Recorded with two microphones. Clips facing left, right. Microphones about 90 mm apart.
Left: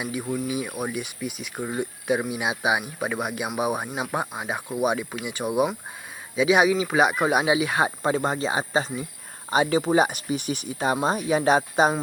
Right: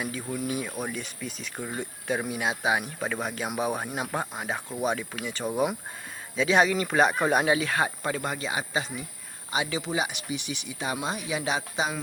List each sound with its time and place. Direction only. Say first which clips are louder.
0.0 s speech: left 4 dB; 15° left (ahead or behind); by 11.9 s 45° left (ahead or behind)